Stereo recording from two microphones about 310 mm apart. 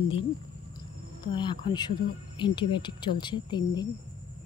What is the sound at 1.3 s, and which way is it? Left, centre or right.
Speech, centre.